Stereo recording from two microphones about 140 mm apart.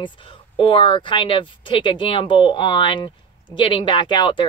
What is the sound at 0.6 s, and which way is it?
Speech, 40° left (ahead or behind).